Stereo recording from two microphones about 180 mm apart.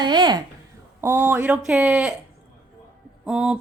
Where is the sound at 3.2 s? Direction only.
5° right (ahead or behind).